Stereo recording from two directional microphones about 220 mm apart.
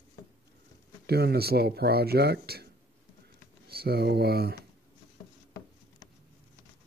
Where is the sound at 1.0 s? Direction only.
45° right (ahead or behind).